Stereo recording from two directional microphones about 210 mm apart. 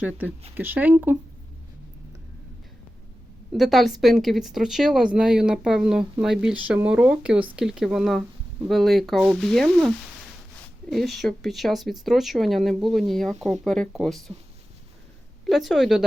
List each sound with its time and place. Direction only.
0.0 s speech: 5° right (ahead or behind)
3.5 s speech: centre (ahead or behind)
15.4 s speech: centre (ahead or behind)